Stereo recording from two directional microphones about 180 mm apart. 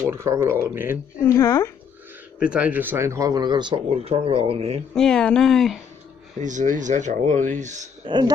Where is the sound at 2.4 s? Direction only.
5° right (ahead or behind); by 4.8 s 35° right (ahead or behind).